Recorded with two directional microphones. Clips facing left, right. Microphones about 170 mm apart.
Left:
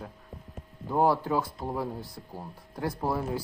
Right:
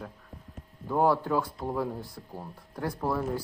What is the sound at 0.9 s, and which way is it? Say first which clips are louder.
Speech: even; 5° left (ahead or behind).